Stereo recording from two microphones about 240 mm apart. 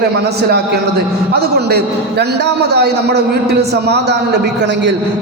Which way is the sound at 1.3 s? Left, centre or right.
Right.